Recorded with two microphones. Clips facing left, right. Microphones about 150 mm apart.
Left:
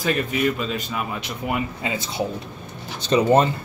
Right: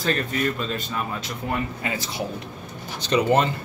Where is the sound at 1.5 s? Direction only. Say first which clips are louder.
Left 2 dB; 20° left (ahead or behind).